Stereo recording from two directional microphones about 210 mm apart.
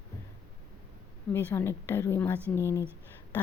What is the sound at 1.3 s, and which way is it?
Speech, 10° left (ahead or behind).